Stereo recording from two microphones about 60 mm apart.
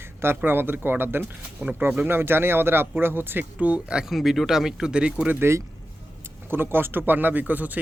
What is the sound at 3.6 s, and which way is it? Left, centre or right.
Speech, right.